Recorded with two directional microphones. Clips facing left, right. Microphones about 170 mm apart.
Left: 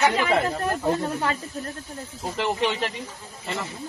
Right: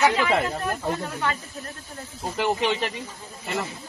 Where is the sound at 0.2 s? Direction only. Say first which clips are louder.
Left 1 dB; 30° left (ahead or behind).